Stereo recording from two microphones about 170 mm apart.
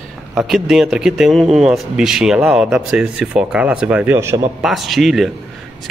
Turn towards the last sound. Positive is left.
turn(degrees=0)  # may be behind; listen again after turning